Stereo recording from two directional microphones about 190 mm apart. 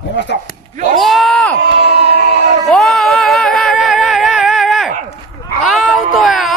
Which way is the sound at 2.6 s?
Centre (ahead or behind).